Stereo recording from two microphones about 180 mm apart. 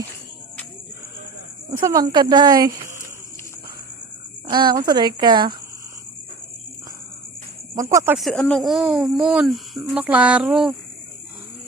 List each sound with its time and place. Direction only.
1.7 s speech: 20° right (ahead or behind)
4.4 s speech: 25° right (ahead or behind)
7.8 s speech: 20° right (ahead or behind)
8.2 s speech: 5° left (ahead or behind)